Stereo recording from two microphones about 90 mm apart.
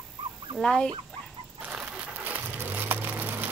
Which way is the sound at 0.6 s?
5° left (ahead or behind).